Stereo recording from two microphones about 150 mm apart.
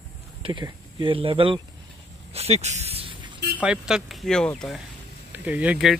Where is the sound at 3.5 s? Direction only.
5° right (ahead or behind).